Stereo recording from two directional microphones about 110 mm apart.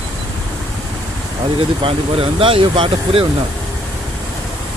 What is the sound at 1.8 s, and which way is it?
Speech, 55° right (ahead or behind).